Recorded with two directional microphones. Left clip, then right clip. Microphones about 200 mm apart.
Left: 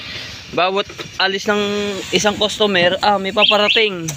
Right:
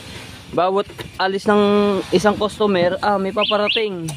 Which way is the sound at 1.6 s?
35° right (ahead or behind).